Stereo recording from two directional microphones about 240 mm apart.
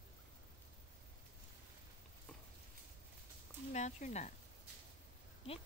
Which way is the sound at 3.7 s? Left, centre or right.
Left.